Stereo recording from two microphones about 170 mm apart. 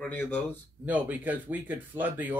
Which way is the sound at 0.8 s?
10° right (ahead or behind).